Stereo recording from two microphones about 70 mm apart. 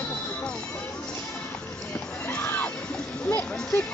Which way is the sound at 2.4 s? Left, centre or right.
Left.